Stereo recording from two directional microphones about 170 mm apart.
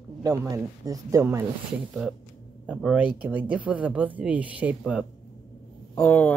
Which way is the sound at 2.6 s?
5° right (ahead or behind).